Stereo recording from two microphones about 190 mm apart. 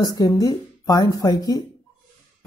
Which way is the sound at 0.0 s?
20° left (ahead or behind).